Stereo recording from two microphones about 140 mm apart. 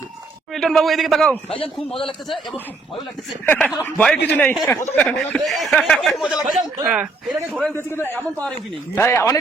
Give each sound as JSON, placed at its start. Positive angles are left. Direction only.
{"t": 0.5, "sound": "speech", "side_deg": 5}
{"t": 1.5, "sound": "a man's voice", "side_deg": 40}
{"t": 3.4, "sound": "a man's voice", "side_deg": 10}
{"t": 7.7, "sound": "a man's voice", "side_deg": 15}